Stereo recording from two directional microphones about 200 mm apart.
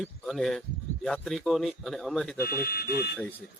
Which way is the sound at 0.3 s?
Centre (ahead or behind).